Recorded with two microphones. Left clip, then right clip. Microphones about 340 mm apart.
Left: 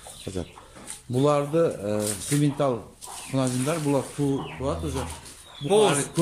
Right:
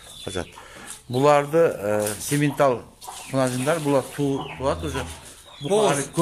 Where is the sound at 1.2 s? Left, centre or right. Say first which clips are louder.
Right 5 dB; right.